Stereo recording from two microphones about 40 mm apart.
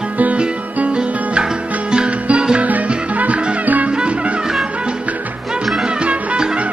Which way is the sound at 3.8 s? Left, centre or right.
Right.